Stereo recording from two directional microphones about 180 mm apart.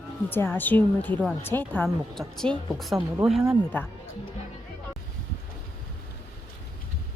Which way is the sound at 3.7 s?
10° left (ahead or behind).